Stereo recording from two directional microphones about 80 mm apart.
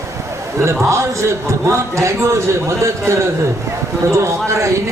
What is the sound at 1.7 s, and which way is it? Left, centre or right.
Speech, right.